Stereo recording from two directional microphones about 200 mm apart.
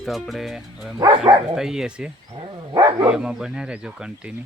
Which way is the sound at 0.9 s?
25° right (ahead or behind).